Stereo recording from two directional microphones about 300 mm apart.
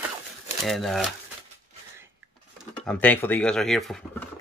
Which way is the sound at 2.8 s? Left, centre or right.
Centre.